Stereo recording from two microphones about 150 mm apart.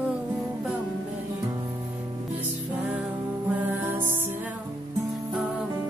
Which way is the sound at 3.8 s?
15° right (ahead or behind).